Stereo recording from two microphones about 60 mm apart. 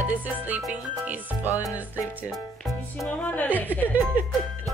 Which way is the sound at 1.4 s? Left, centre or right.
Left.